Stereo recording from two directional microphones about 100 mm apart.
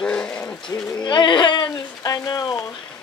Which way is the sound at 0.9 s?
50° left (ahead or behind).